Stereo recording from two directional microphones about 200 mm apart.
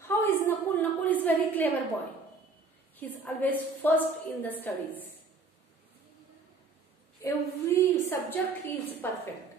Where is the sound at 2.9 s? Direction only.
10° left (ahead or behind).